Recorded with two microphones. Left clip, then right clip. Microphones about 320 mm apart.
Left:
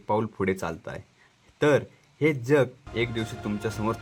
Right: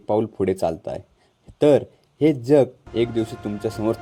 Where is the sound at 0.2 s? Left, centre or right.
Centre.